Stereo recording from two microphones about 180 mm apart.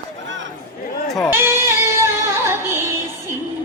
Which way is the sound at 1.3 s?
15° right (ahead or behind).